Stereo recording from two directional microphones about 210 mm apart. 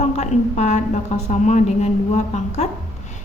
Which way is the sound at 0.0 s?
35° left (ahead or behind).